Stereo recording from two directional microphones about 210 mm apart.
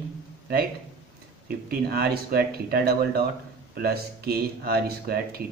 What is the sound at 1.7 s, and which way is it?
Speech, 45° right (ahead or behind).